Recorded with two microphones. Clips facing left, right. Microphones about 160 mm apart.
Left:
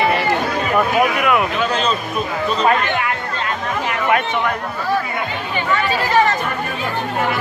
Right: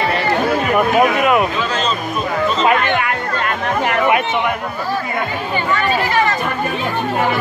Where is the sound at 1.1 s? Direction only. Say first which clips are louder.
Right 3 dB; 25° right (ahead or behind).